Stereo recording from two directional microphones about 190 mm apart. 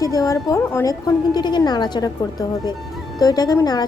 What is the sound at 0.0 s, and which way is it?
A woman's voice, 20° left (ahead or behind).